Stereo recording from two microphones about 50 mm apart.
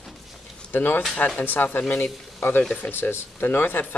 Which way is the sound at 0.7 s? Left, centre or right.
Left.